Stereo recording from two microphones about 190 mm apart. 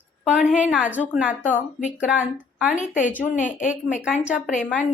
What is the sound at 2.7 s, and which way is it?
A woman's voice, 40° left (ahead or behind).